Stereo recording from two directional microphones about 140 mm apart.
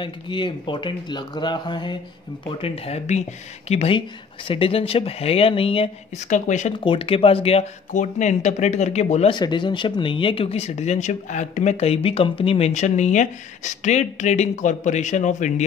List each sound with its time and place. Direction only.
0.0 s speech: 35° left (ahead or behind)
6.2 s speech: 60° left (ahead or behind)
6.8 s speech: 40° left (ahead or behind)
7.9 s speech: 60° left (ahead or behind)
9.3 s speech: 35° left (ahead or behind); by 15.6 s 60° left (ahead or behind)